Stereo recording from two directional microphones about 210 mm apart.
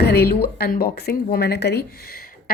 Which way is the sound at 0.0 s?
50° left (ahead or behind).